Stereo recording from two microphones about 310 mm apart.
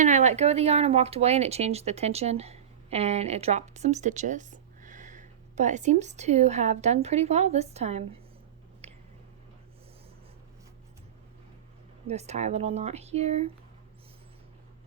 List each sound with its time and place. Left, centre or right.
0.0 s speech: right
8.8 s a sound: right
12.0 s speech: right